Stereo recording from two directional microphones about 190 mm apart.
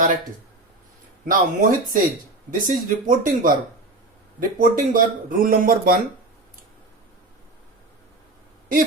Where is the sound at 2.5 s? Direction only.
45° right (ahead or behind).